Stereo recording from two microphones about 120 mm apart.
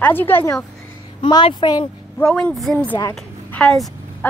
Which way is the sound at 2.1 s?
10° left (ahead or behind).